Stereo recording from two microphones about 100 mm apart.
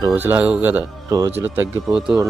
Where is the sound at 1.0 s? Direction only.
35° right (ahead or behind).